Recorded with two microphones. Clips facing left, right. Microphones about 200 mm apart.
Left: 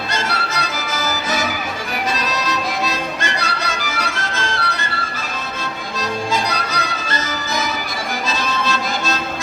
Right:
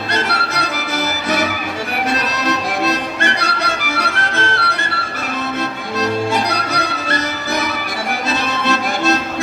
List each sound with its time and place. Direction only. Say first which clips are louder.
0.1 s music: right 4 dB; 65° right (ahead or behind)
6.3 s music: right 3 dB; 65° right (ahead or behind)
8.4 s accordion: right 3 dB; 65° right (ahead or behind)